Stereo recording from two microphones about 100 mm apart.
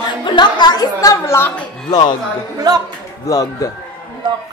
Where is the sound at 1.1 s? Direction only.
25° left (ahead or behind).